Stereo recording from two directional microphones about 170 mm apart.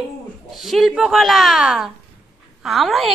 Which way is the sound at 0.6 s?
Centre (ahead or behind).